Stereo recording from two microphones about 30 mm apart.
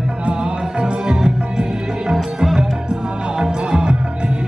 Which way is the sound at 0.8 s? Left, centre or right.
Right.